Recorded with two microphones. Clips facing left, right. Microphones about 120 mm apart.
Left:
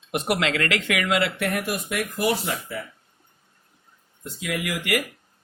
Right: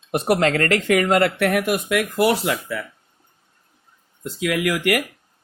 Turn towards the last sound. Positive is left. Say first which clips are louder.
# right 6 dB
turn(degrees=-60)  # may be behind; listen again after turning